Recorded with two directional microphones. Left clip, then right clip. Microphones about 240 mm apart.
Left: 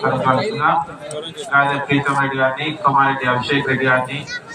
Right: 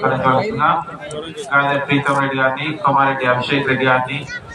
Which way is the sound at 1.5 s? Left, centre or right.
Right.